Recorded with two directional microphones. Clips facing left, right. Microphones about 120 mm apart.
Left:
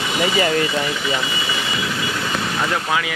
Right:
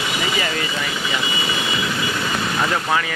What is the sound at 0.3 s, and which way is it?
Speech, 40° left (ahead or behind).